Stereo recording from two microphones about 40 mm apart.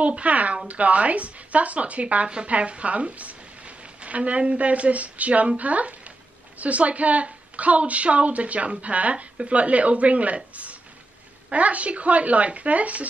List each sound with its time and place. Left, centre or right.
0.0 s a woman's voice: right